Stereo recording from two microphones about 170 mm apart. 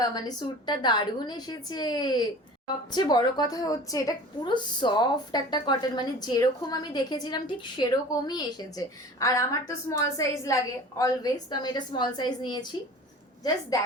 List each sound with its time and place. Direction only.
0.0 s a woman's voice: 25° left (ahead or behind)